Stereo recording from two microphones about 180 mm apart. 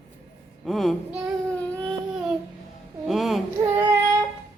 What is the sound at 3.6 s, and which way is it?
Child singing, 15° right (ahead or behind).